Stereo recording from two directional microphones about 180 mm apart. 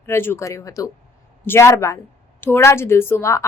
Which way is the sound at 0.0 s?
15° left (ahead or behind).